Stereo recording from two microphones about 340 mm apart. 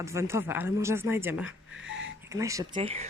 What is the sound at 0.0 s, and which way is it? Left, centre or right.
Speech, centre.